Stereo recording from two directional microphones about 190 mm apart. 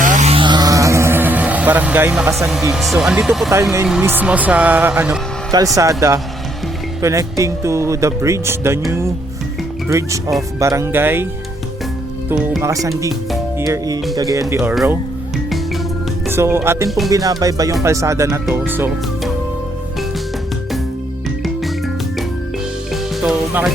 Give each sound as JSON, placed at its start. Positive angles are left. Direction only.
{"t": 0.0, "sound": "a sound", "side_deg": -40}
{"t": 0.3, "sound": "vehicle", "side_deg": -25}
{"t": 2.7, "sound": "speech", "side_deg": 0}
{"t": 3.5, "sound": "speech", "side_deg": -15}
{"t": 5.7, "sound": "speech", "side_deg": -15}
{"t": 12.6, "sound": "speech", "side_deg": -15}
{"t": 13.6, "sound": "music", "side_deg": -20}
{"t": 14.5, "sound": "speech", "side_deg": -10}
{"t": 16.3, "sound": "speech", "side_deg": -10}
{"t": 17.1, "sound": "music", "side_deg": -20}
{"t": 17.8, "sound": "speech", "side_deg": -15}
{"t": 22.9, "sound": "music", "side_deg": 0}